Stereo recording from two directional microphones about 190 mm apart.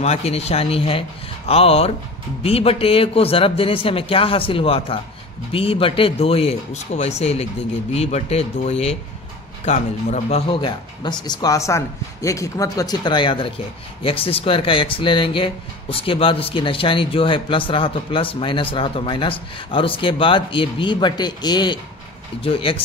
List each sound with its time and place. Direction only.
0.0 s speech: 35° left (ahead or behind)